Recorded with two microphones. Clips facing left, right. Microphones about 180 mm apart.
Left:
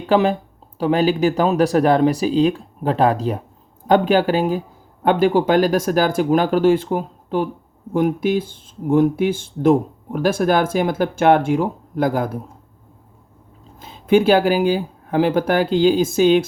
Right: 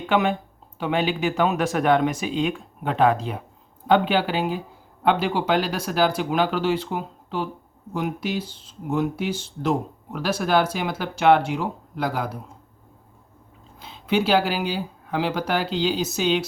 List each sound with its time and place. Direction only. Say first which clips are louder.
0.0 s speech: left 5 dB; 35° left (ahead or behind)
13.7 s speech: left 8 dB; 45° left (ahead or behind)